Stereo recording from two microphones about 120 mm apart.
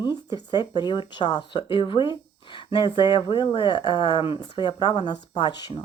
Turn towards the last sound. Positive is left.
turn(degrees=35)  # may be behind; listen again after turning